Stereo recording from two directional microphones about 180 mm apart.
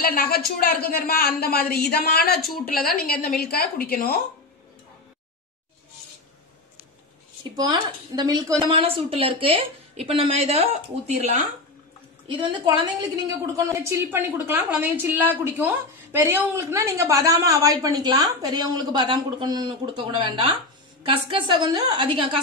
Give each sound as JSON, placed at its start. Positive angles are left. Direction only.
{"t": 0.0, "sound": "a woman's voice", "side_deg": 55}
{"t": 7.5, "sound": "a woman's voice", "side_deg": -25}
{"t": 12.4, "sound": "a woman's voice", "side_deg": -25}
{"t": 13.7, "sound": "a woman's voice", "side_deg": -15}